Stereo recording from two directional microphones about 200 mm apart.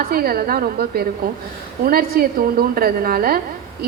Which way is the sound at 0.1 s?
50° right (ahead or behind).